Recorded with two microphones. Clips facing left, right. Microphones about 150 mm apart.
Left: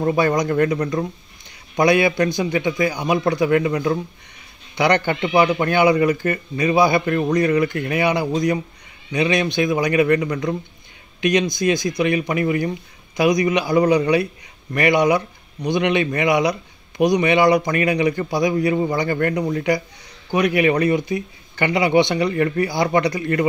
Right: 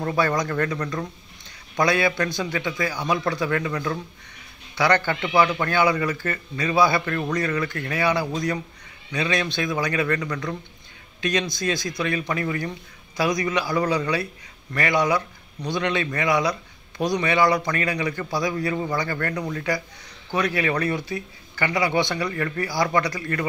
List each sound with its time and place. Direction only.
0.0 s a man's voice: 15° left (ahead or behind)